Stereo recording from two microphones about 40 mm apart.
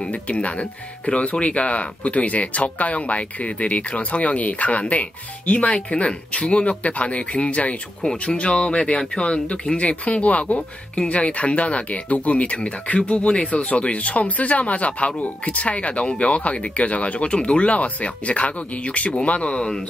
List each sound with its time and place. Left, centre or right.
0.1 s speech: left